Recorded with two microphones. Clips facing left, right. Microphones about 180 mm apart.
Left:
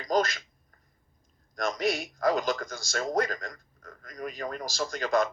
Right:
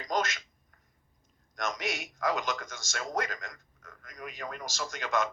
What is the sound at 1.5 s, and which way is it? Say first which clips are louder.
A man's voice: left 6 dB; 35° left (ahead or behind).